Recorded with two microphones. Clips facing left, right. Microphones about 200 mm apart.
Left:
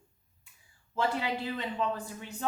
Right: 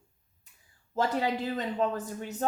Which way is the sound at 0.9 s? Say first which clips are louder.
Right 3 dB; 40° right (ahead or behind).